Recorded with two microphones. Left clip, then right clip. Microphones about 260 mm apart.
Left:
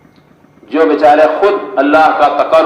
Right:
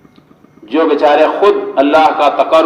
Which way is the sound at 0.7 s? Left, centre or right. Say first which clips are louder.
Left 1 dB; right.